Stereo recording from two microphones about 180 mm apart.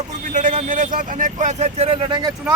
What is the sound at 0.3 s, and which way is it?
Speech, 45° right (ahead or behind).